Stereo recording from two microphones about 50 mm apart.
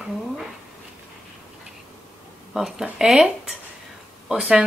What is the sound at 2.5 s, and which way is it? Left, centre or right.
Speech, centre.